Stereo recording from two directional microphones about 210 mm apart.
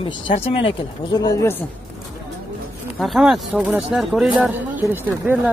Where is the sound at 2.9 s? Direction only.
Centre (ahead or behind).